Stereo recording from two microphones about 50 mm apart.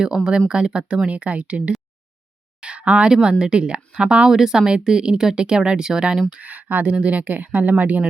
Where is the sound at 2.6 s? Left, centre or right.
Right.